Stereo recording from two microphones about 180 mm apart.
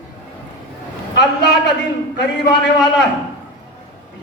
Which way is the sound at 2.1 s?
70° left (ahead or behind).